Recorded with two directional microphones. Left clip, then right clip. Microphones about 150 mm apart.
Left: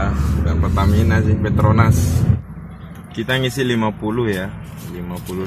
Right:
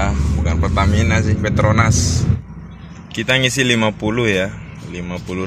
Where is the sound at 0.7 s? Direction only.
Centre (ahead or behind).